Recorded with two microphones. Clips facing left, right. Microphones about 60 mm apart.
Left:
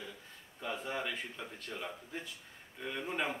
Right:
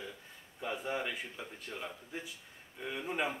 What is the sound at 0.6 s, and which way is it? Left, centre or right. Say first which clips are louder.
A man's voice: right 2 dB; centre.